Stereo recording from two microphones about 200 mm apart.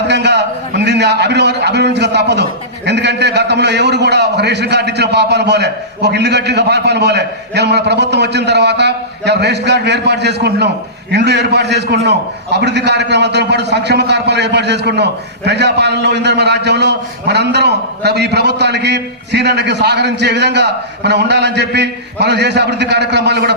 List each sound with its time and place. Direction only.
0.1 s a man's voice: 60° right (ahead or behind)